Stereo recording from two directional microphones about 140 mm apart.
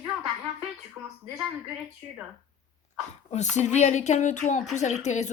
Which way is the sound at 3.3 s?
55° left (ahead or behind).